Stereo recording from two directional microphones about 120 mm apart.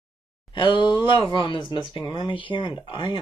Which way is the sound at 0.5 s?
40° left (ahead or behind).